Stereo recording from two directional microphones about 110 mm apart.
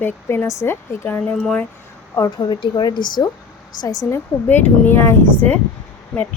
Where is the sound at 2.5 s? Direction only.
45° left (ahead or behind).